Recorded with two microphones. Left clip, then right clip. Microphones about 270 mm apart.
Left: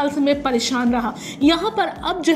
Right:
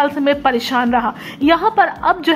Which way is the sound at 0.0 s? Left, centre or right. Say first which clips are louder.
Right 4 dB; centre.